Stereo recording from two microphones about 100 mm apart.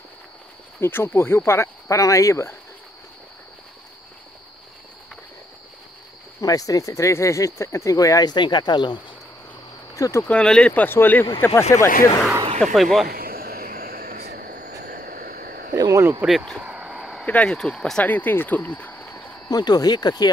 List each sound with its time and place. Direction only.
0.7 s speech: 25° left (ahead or behind)
6.4 s speech: 35° left (ahead or behind)
9.9 s speech: 35° left (ahead or behind)
10.2 s speech: 10° left (ahead or behind)
11.7 s speech: 30° left (ahead or behind)
12.5 s speech: centre (ahead or behind)
15.7 s a sound: 35° right (ahead or behind)
16.3 s speech: centre (ahead or behind)
16.6 s a sound: 10° right (ahead or behind)
17.3 s speech: 10° left (ahead or behind)
19.5 s speech: 40° left (ahead or behind)